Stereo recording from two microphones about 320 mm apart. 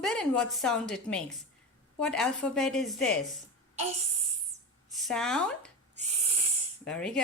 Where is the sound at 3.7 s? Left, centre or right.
Centre.